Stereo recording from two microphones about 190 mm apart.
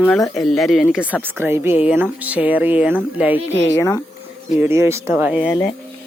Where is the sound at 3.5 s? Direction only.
15° left (ahead or behind).